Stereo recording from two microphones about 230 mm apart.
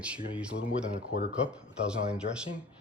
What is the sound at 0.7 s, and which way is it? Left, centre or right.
Speech, left.